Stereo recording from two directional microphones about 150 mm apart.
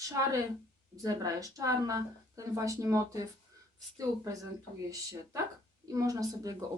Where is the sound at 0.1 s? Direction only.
20° right (ahead or behind).